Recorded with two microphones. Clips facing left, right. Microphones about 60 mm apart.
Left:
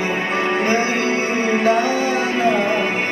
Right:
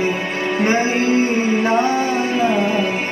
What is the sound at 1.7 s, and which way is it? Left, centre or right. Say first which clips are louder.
Music: even; right.